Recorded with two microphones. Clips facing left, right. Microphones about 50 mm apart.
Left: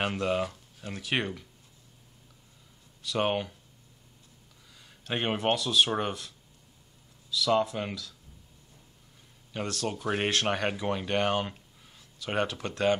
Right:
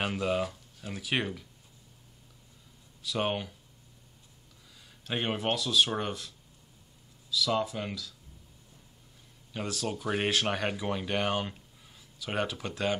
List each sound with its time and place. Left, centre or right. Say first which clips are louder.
0.0 s speech: left 1 dB; centre
3.0 s speech: left 3 dB; centre
5.0 s speech: left 3 dB; centre
9.5 s speech: left 1 dB; centre